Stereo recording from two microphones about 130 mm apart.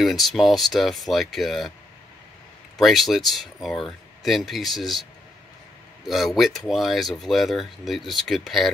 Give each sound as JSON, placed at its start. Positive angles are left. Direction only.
{"t": 0.0, "sound": "speech", "side_deg": 0}
{"t": 2.8, "sound": "speech", "side_deg": 0}
{"t": 6.0, "sound": "speech", "side_deg": 0}